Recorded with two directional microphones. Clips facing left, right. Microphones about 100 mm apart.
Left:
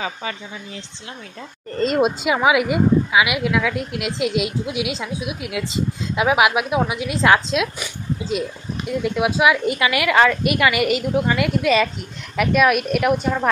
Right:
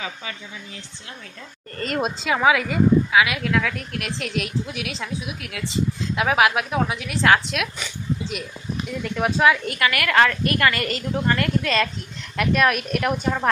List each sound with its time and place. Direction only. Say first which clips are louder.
0.0 s speech: left 6 dB; 40° left (ahead or behind)
1.8 s a woman's voice: left 7 dB; 20° left (ahead or behind)
9.0 s speech: left 1 dB; 10° left (ahead or behind)